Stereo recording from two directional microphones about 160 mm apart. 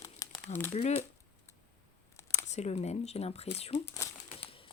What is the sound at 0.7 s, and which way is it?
Speech, 40° left (ahead or behind).